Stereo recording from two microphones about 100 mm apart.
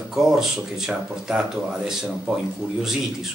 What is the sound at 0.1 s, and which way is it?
Speech, 5° right (ahead or behind).